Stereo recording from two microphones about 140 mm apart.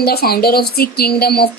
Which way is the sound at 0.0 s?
90° left.